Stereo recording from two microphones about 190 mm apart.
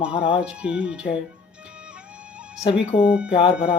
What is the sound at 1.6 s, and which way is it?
Music, 5° right (ahead or behind).